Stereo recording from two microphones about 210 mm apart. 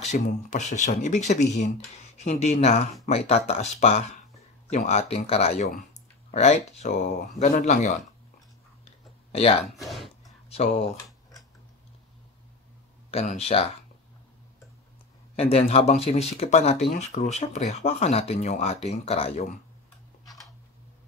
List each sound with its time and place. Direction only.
0.0 s speech: 35° left (ahead or behind)
8.8 s a sound: 30° left (ahead or behind)
9.7 s speech: centre (ahead or behind)
10.5 s speech: 30° left (ahead or behind)
13.1 s speech: 30° left (ahead or behind)
15.3 s speech: 30° left (ahead or behind)